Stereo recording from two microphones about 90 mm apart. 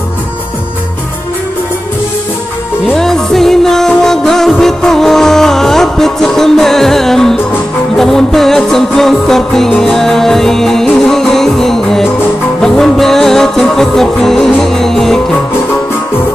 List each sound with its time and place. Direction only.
2.9 s music: 5° left (ahead or behind)